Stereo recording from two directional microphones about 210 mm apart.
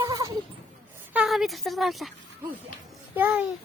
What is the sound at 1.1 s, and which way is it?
A woman's voice, 5° right (ahead or behind).